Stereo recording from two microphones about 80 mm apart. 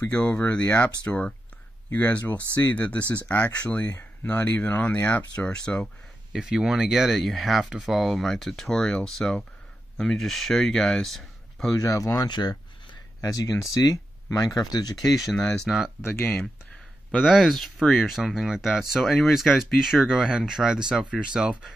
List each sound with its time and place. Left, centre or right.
0.0 s speech: centre
6.3 s speech: centre
11.8 s speech: left
12.3 s speech: left
13.2 s speech: left
15.2 s speech: centre
16.0 s speech: left
17.2 s speech: centre